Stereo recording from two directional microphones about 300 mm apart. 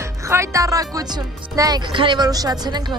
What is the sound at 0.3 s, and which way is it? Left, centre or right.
Speech, centre.